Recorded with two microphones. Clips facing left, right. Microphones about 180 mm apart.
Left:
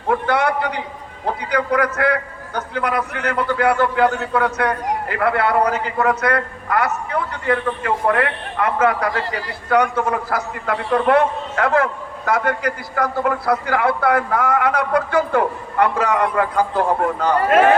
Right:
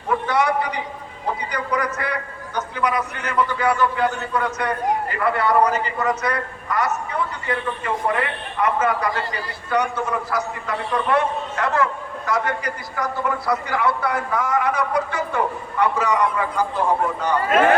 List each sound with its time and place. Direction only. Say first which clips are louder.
0.1 s a man's voice: left 2 dB; 60° left (ahead or behind)